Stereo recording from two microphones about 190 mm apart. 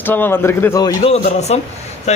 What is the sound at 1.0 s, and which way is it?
Speech, 30° left (ahead or behind).